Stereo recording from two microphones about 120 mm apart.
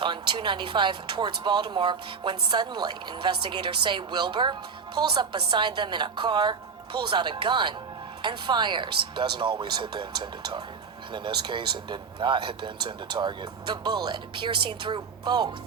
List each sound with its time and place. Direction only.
0.0 s speech: 40° right (ahead or behind)
11.1 s speech: 40° right (ahead or behind)